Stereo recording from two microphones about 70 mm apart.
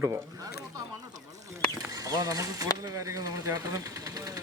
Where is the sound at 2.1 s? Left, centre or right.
Right.